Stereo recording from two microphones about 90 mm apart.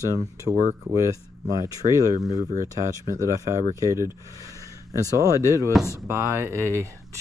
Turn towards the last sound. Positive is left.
turn(degrees=-35)  # may be behind; listen again after turning